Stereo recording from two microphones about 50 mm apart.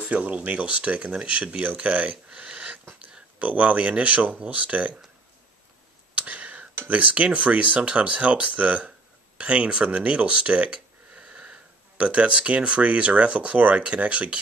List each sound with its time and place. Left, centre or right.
0.0 s speech: right
6.1 s a sound: right
6.9 s speech: right